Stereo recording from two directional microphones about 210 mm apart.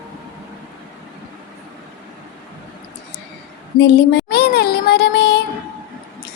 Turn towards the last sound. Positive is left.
turn(degrees=50)  # may be behind; listen again after turning